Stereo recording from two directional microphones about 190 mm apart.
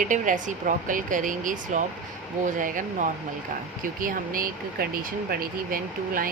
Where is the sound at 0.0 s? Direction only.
45° right (ahead or behind).